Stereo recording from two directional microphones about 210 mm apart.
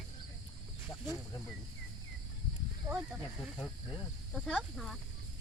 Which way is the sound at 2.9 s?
15° right (ahead or behind).